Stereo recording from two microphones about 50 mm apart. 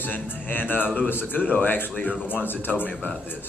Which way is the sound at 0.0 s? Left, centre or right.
Left.